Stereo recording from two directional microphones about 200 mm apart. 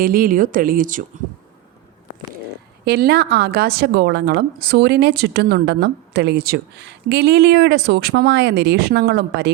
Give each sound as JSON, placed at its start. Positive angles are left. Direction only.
{"t": 0.0, "sound": "speech", "side_deg": -45}
{"t": 2.8, "sound": "a woman's voice", "side_deg": -50}